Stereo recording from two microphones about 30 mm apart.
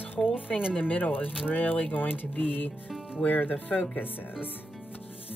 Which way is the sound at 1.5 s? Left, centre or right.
Left.